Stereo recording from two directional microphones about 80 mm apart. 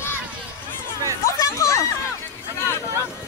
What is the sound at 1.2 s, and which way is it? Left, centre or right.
Chatter, left.